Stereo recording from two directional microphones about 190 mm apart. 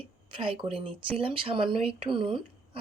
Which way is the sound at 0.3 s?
25° right (ahead or behind).